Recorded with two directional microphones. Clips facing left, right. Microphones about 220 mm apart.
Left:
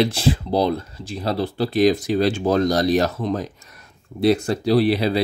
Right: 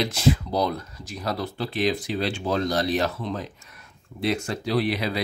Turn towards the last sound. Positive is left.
turn(degrees=30)  # may be behind; listen again after turning